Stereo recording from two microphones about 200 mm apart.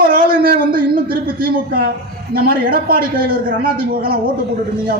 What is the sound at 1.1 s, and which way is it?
A man's voice, 45° right (ahead or behind).